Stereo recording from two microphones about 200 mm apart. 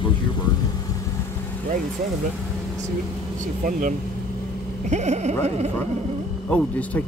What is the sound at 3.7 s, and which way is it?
Speech, 40° right (ahead or behind).